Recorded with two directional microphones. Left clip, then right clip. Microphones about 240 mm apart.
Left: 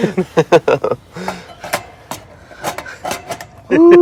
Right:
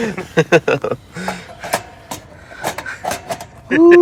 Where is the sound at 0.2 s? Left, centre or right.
Left.